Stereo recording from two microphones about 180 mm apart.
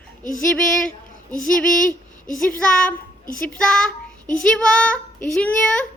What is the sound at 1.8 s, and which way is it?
Speech, 45° left (ahead or behind).